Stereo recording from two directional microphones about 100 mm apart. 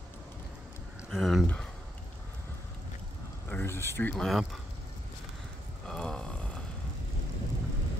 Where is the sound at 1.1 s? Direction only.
Centre (ahead or behind).